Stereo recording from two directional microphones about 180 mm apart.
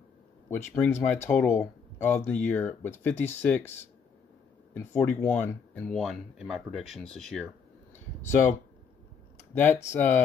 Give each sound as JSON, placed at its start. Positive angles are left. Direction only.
{"t": 0.5, "sound": "speech", "side_deg": 10}
{"t": 4.7, "sound": "speech", "side_deg": 15}
{"t": 7.9, "sound": "a sound", "side_deg": 15}
{"t": 9.5, "sound": "speech", "side_deg": 10}